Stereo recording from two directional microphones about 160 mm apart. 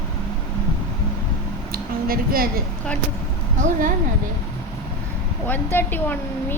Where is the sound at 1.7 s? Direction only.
65° right (ahead or behind).